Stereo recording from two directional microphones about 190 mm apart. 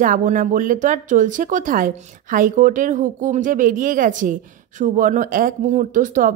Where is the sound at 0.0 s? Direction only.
45° right (ahead or behind).